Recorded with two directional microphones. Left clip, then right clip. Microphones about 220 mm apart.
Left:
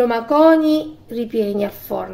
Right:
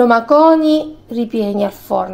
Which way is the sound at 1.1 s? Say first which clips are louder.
Right 3 dB; 10° right (ahead or behind).